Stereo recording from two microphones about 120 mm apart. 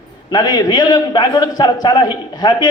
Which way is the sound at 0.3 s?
35° left (ahead or behind).